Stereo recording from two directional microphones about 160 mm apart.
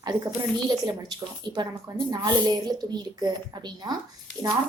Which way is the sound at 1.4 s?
30° right (ahead or behind).